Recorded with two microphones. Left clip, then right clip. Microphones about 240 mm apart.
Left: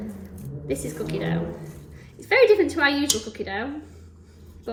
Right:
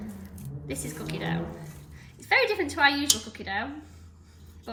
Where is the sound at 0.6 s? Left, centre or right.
Right.